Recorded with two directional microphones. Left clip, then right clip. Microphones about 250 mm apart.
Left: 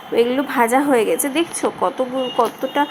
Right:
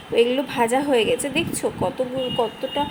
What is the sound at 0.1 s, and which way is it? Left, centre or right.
A woman's voice, centre.